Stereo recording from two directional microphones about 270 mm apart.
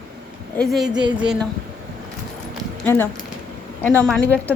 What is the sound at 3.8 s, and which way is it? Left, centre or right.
Speech, centre.